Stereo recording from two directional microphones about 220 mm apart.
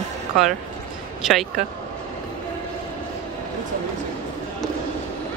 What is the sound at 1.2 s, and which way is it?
Speech, centre (ahead or behind).